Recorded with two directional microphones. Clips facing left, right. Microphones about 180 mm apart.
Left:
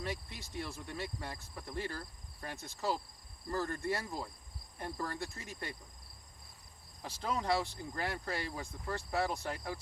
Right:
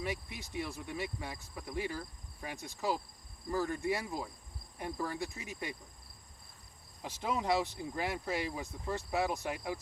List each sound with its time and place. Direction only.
0.0 s speech: 15° right (ahead or behind)
7.0 s speech: 10° right (ahead or behind)